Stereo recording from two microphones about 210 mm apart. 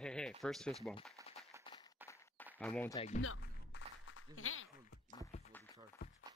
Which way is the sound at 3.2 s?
80° left.